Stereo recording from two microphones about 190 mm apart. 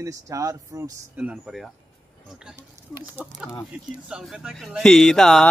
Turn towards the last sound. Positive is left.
turn(degrees=0)  # may be behind; listen again after turning